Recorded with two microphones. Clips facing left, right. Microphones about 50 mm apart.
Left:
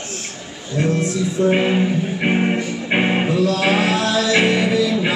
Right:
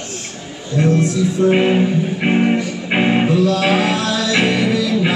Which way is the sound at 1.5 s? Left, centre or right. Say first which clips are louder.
Right 3 dB; centre.